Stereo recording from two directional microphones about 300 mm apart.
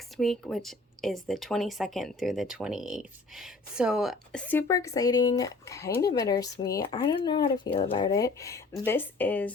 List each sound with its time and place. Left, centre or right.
0.2 s speech: centre